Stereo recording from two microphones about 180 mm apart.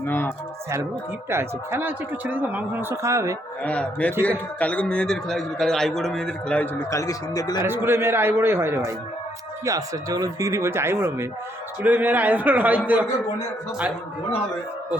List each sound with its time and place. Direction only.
0.0 s speech: 10° left (ahead or behind)
1.3 s speech: 15° right (ahead or behind)
3.6 s speech: 5° left (ahead or behind)
4.1 s speech: 15° right (ahead or behind)
4.6 s a man's voice: 5° left (ahead or behind)
7.6 s speech: 15° right (ahead or behind)